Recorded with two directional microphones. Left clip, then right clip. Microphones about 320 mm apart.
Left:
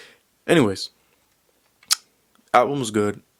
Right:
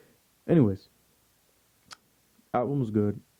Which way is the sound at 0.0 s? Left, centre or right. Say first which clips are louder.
Left 9 dB; centre.